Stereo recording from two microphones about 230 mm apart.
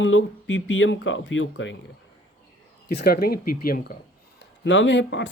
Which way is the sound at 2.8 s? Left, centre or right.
Left.